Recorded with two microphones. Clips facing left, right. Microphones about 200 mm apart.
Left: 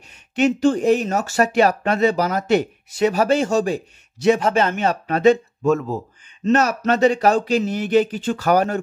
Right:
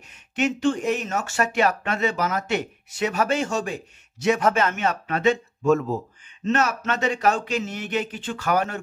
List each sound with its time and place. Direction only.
0.4 s speech: 35° left (ahead or behind)
5.7 s speech: centre (ahead or behind)
6.4 s speech: 40° left (ahead or behind)